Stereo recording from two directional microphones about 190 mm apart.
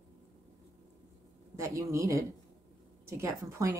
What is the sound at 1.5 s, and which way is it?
A woman's voice, 15° right (ahead or behind).